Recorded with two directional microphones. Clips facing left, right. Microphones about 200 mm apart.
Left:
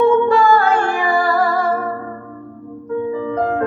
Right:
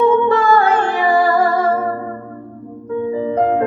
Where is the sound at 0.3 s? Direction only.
20° right (ahead or behind).